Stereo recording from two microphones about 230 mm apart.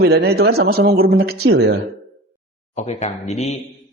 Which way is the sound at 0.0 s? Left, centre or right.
Right.